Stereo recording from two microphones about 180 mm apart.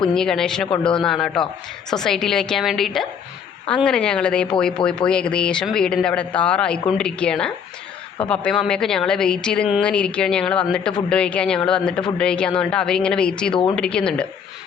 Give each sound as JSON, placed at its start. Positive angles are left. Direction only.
{"t": 0.1, "sound": "speech", "side_deg": 5}
{"t": 13.5, "sound": "a woman's voice", "side_deg": 25}
{"t": 13.7, "sound": "speech", "side_deg": 5}